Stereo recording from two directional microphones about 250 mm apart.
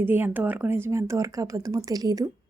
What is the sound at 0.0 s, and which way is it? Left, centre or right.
Speech, centre.